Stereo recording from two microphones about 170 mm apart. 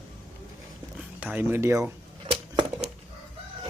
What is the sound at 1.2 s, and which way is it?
Speech, 10° right (ahead or behind).